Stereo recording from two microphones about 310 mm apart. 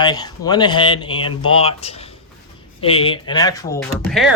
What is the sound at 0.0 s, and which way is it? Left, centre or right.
Speech, centre.